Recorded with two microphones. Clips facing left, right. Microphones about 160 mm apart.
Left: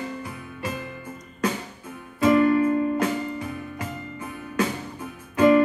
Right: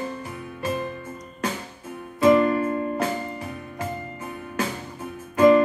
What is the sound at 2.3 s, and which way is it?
Music, 40° right (ahead or behind).